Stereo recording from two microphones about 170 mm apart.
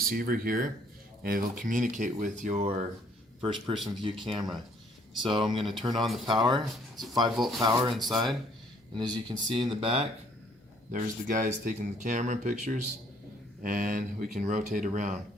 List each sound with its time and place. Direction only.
0.1 s a man's voice: 55° right (ahead or behind); by 5.6 s 30° right (ahead or behind)
6.0 s speech: centre (ahead or behind)
6.4 s speech: 25° right (ahead or behind)
7.3 s speech: centre (ahead or behind)
7.6 s speech: 30° right (ahead or behind)
7.9 s speech: centre (ahead or behind)
9.0 s speech: 25° right (ahead or behind)
10.9 s speech: 50° right (ahead or behind)